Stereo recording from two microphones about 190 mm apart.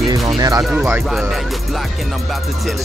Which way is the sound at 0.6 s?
Centre (ahead or behind).